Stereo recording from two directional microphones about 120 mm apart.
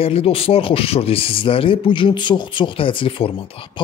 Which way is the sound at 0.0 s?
55° left (ahead or behind).